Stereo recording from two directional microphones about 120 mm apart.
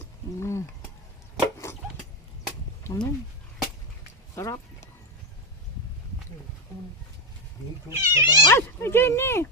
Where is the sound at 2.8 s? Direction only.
30° left (ahead or behind).